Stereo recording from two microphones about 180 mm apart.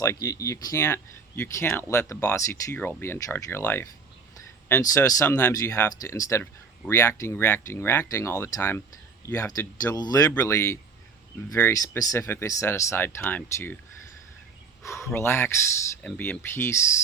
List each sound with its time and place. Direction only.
0.0 s speech: 20° left (ahead or behind)
14.8 s speech: 15° left (ahead or behind)